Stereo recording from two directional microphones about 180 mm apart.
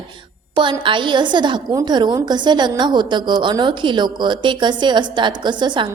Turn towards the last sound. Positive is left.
turn(degrees=-25)  # may be behind; listen again after turning